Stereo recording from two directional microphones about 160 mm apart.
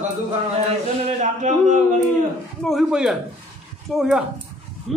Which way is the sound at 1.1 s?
50° right (ahead or behind).